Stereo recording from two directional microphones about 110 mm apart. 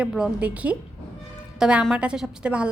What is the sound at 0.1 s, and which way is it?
A woman's voice, 10° right (ahead or behind).